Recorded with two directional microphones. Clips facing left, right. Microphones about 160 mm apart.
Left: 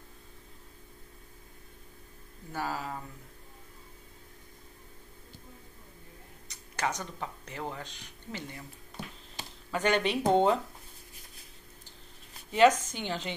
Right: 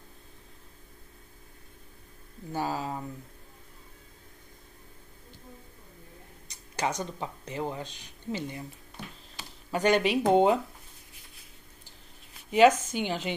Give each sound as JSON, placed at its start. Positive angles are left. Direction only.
{"t": 2.5, "sound": "speech", "side_deg": -20}
{"t": 6.8, "sound": "speech", "side_deg": -15}
{"t": 9.7, "sound": "speech", "side_deg": -10}
{"t": 12.4, "sound": "speech", "side_deg": -10}